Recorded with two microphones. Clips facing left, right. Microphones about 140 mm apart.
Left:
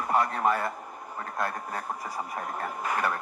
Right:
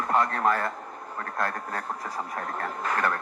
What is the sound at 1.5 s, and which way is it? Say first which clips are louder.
Speech: right 1 dB; 55° right (ahead or behind).